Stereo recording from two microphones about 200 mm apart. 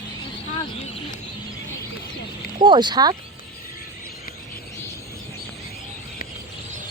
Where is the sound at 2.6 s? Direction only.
25° right (ahead or behind).